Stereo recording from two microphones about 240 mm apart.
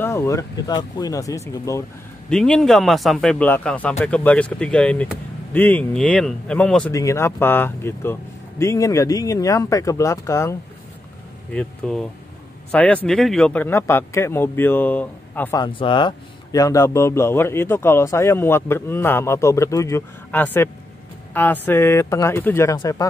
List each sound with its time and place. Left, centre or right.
0.0 s a man's voice: centre
11.5 s a man's voice: centre
15.6 s a man's voice: left